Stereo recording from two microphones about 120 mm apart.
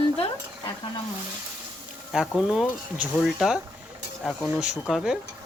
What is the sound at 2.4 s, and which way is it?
Speech, 5° right (ahead or behind).